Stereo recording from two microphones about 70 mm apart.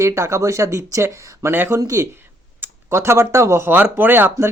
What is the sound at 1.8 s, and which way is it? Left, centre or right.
Speech, right.